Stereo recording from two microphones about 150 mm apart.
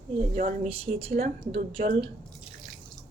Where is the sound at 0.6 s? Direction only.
45° right (ahead or behind).